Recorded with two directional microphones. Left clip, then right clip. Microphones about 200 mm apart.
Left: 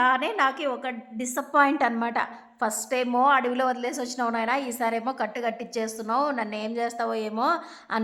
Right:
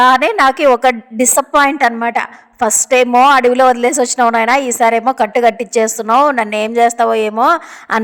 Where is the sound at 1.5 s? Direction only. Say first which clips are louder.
Right 8 dB; 30° right (ahead or behind).